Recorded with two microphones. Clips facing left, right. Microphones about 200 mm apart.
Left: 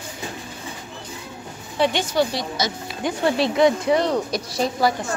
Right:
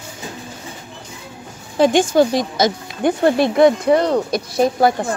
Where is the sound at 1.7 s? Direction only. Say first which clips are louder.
Right 7 dB; 45° right (ahead or behind).